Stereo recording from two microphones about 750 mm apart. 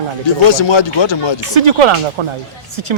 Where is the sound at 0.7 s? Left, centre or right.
Left.